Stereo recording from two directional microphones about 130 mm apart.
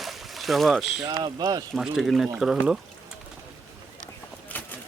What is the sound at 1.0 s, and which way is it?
Speech, 30° right (ahead or behind).